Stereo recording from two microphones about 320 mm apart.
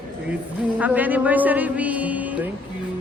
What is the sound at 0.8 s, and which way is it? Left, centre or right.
A man's voice, centre.